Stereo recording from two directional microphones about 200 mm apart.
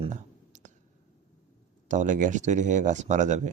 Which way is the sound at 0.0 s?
40° right (ahead or behind).